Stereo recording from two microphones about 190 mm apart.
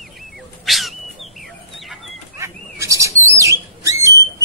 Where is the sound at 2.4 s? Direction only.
15° right (ahead or behind).